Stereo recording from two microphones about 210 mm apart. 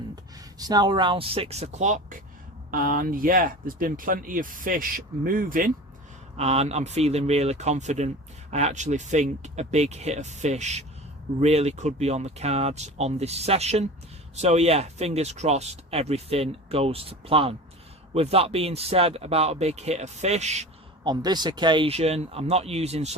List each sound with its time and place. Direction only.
0.6 s speech: 20° right (ahead or behind); by 5.6 s 40° right (ahead or behind)
6.3 s speech: 30° right (ahead or behind)
21.0 s speech: 20° right (ahead or behind)